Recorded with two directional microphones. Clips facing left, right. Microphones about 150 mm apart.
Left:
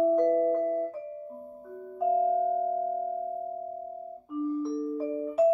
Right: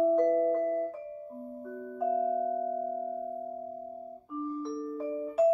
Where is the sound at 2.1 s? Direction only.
20° left (ahead or behind).